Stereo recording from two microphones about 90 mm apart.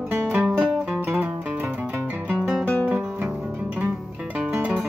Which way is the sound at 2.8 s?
15° right (ahead or behind).